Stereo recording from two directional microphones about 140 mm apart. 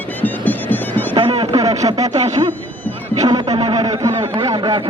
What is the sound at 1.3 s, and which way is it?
Speech, 40° right (ahead or behind).